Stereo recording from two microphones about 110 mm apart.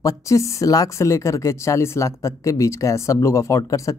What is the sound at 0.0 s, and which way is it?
Speech, 30° left (ahead or behind).